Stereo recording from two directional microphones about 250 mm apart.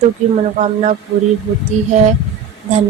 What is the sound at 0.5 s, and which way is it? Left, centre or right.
Speech, right.